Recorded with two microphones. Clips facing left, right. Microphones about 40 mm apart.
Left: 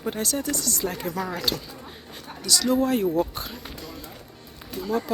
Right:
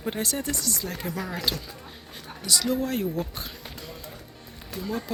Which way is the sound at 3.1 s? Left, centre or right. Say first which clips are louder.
Left 7 dB; centre.